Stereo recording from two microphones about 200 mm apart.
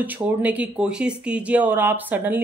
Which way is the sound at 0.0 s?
10° right (ahead or behind).